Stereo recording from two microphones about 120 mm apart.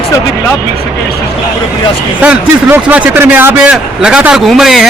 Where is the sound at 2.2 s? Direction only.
15° right (ahead or behind).